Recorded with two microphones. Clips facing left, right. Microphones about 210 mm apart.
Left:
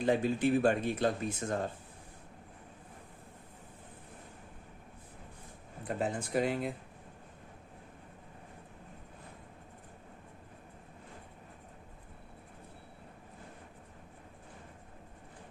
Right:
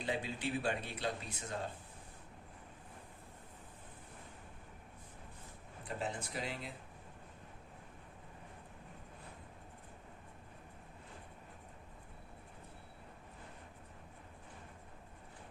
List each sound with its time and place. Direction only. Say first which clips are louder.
0.0 s speech: left 10 dB; 50° left (ahead or behind)
6.0 s speech: left 10 dB; 50° left (ahead or behind)